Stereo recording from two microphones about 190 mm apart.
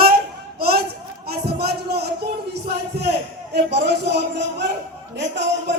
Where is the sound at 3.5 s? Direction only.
65° right (ahead or behind).